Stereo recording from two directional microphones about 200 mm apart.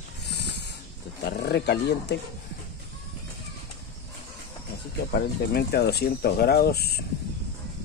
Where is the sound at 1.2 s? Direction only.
55° left (ahead or behind).